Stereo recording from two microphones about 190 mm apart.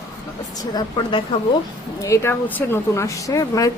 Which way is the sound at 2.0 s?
15° left (ahead or behind).